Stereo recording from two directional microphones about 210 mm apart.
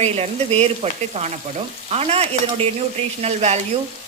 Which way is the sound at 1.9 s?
30° right (ahead or behind).